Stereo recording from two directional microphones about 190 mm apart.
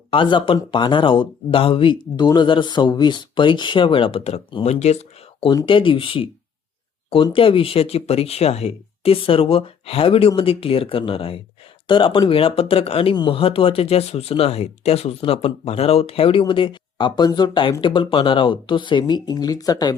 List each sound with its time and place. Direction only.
0.1 s speech: 25° left (ahead or behind)
5.5 s speech: 25° left (ahead or behind)